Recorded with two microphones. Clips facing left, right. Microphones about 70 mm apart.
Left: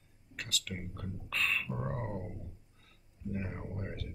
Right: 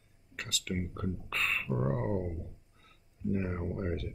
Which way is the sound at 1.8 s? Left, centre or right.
Centre.